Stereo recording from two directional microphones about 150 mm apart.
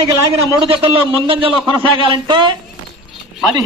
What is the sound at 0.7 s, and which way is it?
A man's voice, 35° right (ahead or behind).